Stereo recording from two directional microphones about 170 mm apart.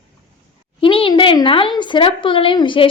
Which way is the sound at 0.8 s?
30° left (ahead or behind).